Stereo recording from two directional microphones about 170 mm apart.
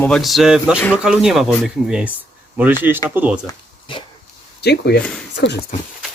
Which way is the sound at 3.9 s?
30° left (ahead or behind).